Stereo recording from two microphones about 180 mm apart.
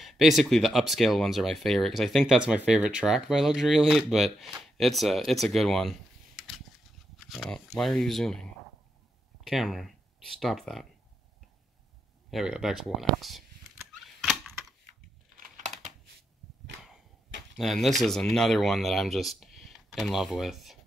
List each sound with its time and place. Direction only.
0.0 s speech: centre (ahead or behind)
12.3 s a sound: centre (ahead or behind)
15.3 s typing: 45° right (ahead or behind)
17.6 s speech: centre (ahead or behind)